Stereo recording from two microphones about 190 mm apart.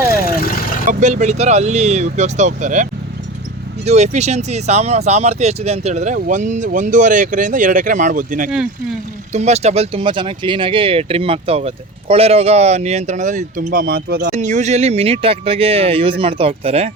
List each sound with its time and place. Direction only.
0.2 s vehicle: 50° left (ahead or behind)
0.9 s speech: 40° right (ahead or behind)
3.8 s speech: 35° right (ahead or behind)
8.4 s speech: 5° right (ahead or behind)
9.3 s speech: 35° right (ahead or behind); by 14.3 s 55° right (ahead or behind)
14.3 s speech: 40° right (ahead or behind)